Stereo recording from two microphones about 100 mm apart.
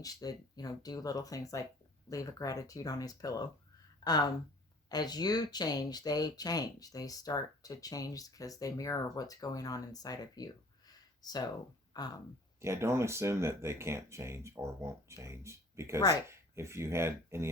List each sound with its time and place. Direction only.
0.0 s speech: 40° left (ahead or behind)
12.6 s speech: 25° right (ahead or behind)